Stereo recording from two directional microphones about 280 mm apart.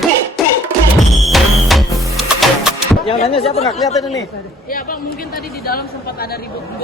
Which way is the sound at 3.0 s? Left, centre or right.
Left.